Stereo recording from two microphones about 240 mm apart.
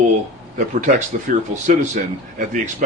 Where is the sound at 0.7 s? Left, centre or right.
Right.